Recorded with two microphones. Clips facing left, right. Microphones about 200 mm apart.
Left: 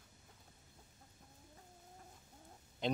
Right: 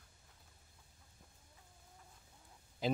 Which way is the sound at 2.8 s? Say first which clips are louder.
Right 1 dB; 5° right (ahead or behind).